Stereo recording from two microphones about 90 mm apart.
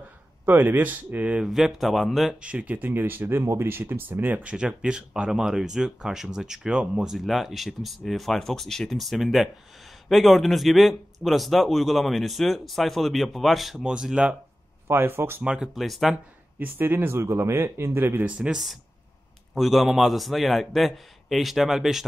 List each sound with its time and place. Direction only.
0.5 s speech: 20° right (ahead or behind)
1.4 s speech: 5° right (ahead or behind)
2.4 s speech: 15° right (ahead or behind)
14.9 s speech: 25° right (ahead or behind)
15.4 s speech: 10° right (ahead or behind)
16.5 s speech: 20° right (ahead or behind)
18.4 s speech: 5° right (ahead or behind)